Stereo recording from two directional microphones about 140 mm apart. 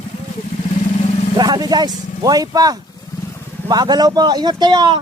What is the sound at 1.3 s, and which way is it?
Speech, 30° right (ahead or behind).